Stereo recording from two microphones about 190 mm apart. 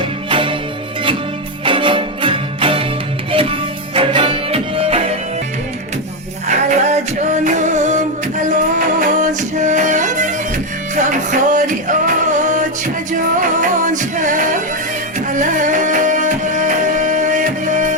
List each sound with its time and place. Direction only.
0.0 s music: 25° right (ahead or behind)
1.6 s music: 25° right (ahead or behind)
6.5 s music: 40° right (ahead or behind)